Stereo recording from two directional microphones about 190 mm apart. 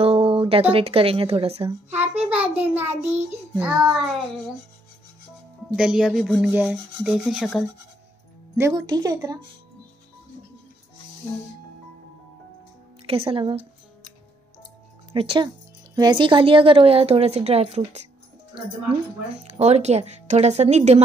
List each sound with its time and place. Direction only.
0.0 s speech: 30° right (ahead or behind)
1.7 s a child's voice: 10° right (ahead or behind)
2.2 s child singing: 5° right (ahead or behind)
3.3 s rub: 5° right (ahead or behind)
5.8 s rub: 5° right (ahead or behind)
8.5 s speech: 15° right (ahead or behind)
13.0 s speech: 30° right (ahead or behind)
15.1 s speech: 25° right (ahead or behind)
19.5 s speech: 35° right (ahead or behind)